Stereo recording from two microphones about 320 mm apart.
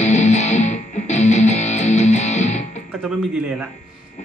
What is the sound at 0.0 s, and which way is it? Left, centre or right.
Music, left.